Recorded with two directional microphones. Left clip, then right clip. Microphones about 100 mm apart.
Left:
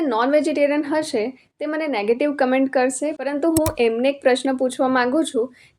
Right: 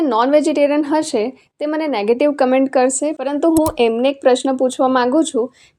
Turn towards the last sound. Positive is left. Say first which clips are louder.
# right 4 dB
turn(degrees=-25)  # may be behind; listen again after turning